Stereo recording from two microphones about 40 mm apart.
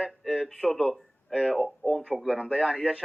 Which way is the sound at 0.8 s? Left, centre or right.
Centre.